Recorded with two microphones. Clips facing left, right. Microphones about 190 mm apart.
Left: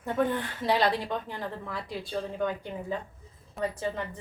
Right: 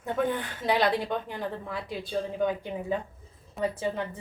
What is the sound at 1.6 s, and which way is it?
A woman's voice, centre (ahead or behind).